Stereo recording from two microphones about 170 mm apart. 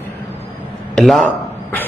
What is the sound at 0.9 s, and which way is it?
Speech, centre (ahead or behind).